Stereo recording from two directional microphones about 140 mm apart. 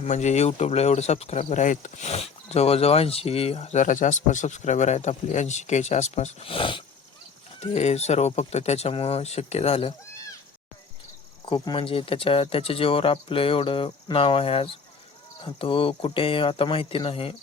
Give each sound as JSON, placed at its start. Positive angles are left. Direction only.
{"t": 0.0, "sound": "speech", "side_deg": 55}
{"t": 7.6, "sound": "speech", "side_deg": 50}
{"t": 11.4, "sound": "speech", "side_deg": 35}